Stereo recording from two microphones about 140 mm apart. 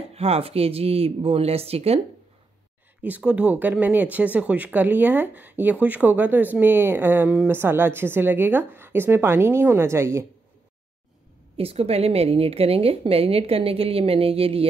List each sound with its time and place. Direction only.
0.1 s a woman's voice: 45° right (ahead or behind)
3.0 s speech: 10° right (ahead or behind)
11.5 s a woman's voice: 45° right (ahead or behind)